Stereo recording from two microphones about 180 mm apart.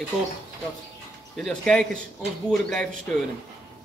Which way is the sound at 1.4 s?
5° left (ahead or behind).